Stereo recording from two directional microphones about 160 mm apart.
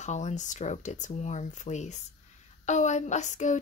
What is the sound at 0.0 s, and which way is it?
Speech, 45° left (ahead or behind).